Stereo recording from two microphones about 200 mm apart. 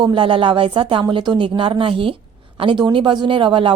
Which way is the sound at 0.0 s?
25° right (ahead or behind).